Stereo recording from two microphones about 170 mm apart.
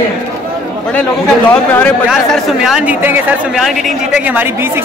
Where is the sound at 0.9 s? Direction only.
10° left (ahead or behind).